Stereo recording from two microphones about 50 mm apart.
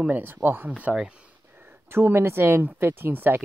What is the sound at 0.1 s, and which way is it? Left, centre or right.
Speech, right.